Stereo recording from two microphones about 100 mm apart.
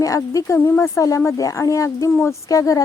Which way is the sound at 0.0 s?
35° left (ahead or behind).